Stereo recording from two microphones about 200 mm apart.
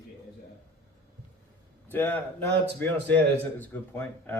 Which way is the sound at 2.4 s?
55° right (ahead or behind).